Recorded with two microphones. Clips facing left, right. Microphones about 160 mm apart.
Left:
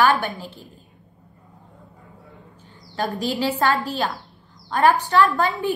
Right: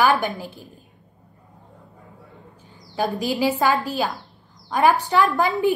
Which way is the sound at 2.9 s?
15° right (ahead or behind).